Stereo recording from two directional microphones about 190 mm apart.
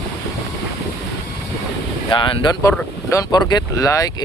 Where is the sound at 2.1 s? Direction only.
25° left (ahead or behind).